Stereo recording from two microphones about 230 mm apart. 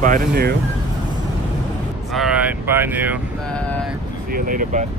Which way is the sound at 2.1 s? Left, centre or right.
Centre.